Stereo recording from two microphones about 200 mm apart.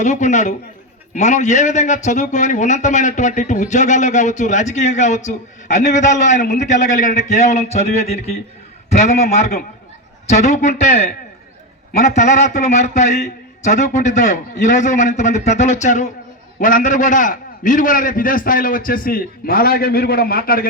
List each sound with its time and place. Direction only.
0.0 s a man's voice: 35° left (ahead or behind)
12.1 s a man's voice: 35° left (ahead or behind)